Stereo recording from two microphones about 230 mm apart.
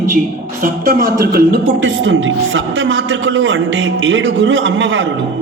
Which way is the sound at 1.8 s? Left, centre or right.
Right.